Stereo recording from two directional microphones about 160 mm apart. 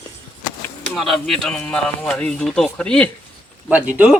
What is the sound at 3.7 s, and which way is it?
Speech, 10° right (ahead or behind).